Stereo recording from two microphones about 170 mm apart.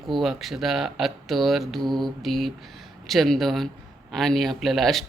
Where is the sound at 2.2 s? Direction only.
Centre (ahead or behind).